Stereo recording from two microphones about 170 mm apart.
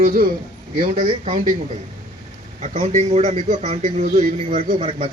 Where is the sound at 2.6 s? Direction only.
45° right (ahead or behind).